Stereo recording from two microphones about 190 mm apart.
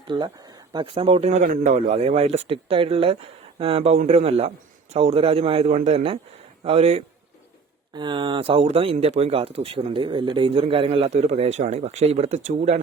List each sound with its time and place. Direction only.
0.1 s speech: 25° right (ahead or behind)